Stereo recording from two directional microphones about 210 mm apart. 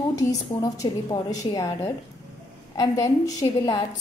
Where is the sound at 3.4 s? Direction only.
20° left (ahead or behind).